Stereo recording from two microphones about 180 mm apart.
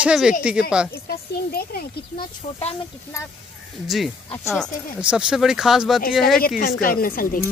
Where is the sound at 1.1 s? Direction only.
60° left (ahead or behind).